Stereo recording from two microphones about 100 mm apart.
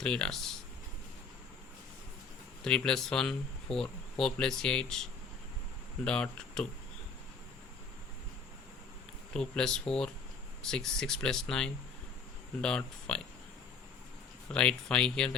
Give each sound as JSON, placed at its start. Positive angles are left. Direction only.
{"t": 0.0, "sound": "speech", "side_deg": 10}
{"t": 2.6, "sound": "speech", "side_deg": 10}
{"t": 6.1, "sound": "speech", "side_deg": 10}
{"t": 9.3, "sound": "speech", "side_deg": 5}
{"t": 14.5, "sound": "speech", "side_deg": 10}